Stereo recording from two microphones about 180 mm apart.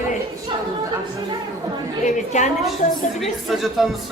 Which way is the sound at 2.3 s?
40° left (ahead or behind).